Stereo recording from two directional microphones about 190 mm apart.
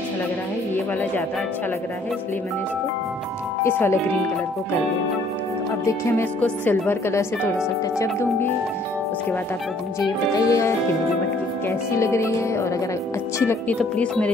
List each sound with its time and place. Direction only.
3.6 s speech: 15° left (ahead or behind)
5.9 s speech: 15° left (ahead or behind)
10.0 s speech: 15° left (ahead or behind)
11.9 s speech: 15° left (ahead or behind)